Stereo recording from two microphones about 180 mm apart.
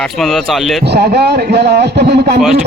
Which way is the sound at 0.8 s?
65° right (ahead or behind).